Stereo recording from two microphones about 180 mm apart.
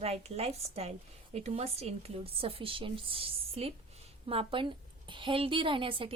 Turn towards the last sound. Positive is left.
turn(degrees=-30)  # may be behind; listen again after turning